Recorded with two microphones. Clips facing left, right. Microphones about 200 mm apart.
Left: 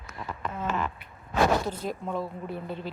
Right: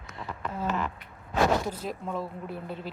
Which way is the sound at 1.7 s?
Centre (ahead or behind).